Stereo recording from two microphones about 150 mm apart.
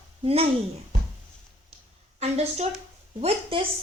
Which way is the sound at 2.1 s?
45° right (ahead or behind).